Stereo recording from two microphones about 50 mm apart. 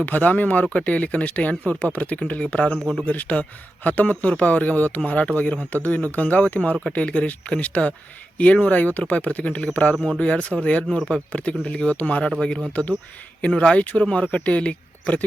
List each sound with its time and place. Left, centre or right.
0.0 s speech: left
2.7 s speech: centre
3.0 s speech: left
12.4 s speech: centre
13.4 s speech: left